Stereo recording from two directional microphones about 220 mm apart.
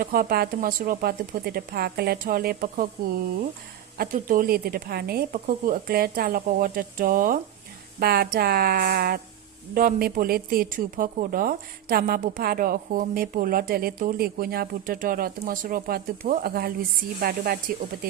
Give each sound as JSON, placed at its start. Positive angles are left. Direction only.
{"t": 0.0, "sound": "speech", "side_deg": -40}
{"t": 3.9, "sound": "speech", "side_deg": -40}